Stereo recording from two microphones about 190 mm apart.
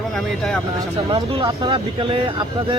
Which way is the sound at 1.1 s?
20° right (ahead or behind).